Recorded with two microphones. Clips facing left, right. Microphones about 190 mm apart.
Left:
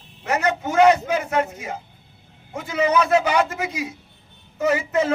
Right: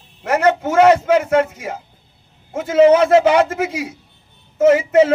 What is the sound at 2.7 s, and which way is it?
Speech, 90° right.